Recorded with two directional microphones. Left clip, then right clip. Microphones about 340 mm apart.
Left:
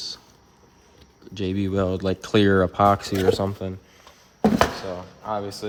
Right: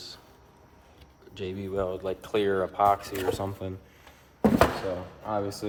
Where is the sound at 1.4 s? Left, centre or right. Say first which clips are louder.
Left 6 dB; left.